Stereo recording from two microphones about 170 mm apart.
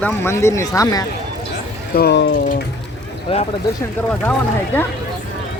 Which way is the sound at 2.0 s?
80° left.